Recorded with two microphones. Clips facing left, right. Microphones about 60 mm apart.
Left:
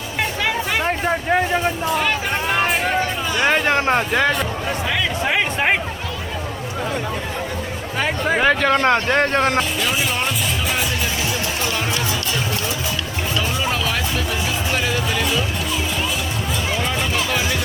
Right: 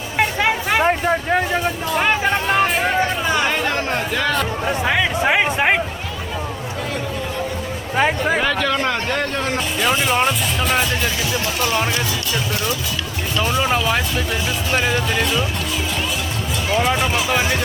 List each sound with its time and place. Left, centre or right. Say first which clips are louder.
0.3 s a sound: right 2 dB; right
1.0 s speech: even; centre
2.5 s music: right 1 dB; centre
3.0 s music: right 3 dB; right
3.5 s speech: left 4 dB; left
4.6 s speech: right 3 dB; right
7.9 s speech: right 4 dB; centre
8.4 s speech: left 4 dB; left
9.6 s speech: right 1 dB; centre
11.6 s speech: right 6 dB; right
13.6 s music: right 3 dB; right
14.7 s speech: right 4 dB; centre
15.2 s speech: right 1 dB; centre
17.0 s speech: right 2 dB; centre